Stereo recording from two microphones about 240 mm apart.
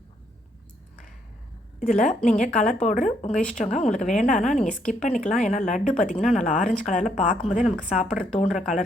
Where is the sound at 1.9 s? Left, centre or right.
Left.